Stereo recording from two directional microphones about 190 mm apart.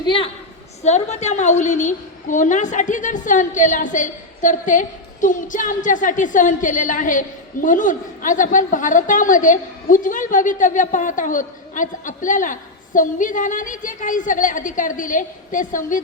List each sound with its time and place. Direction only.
0.0 s a woman's voice: 25° left (ahead or behind)
0.8 s a woman's voice: 35° left (ahead or behind)